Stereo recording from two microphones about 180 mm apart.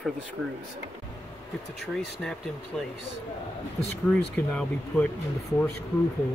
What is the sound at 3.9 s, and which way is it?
Speech, 5° left (ahead or behind).